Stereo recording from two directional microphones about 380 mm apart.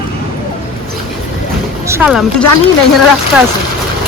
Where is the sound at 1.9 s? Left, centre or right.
Centre.